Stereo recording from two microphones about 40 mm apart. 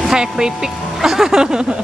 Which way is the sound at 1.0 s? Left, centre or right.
Centre.